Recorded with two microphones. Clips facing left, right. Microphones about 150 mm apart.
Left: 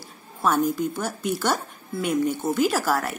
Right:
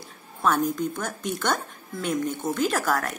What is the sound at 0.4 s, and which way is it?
Speech, 10° left (ahead or behind).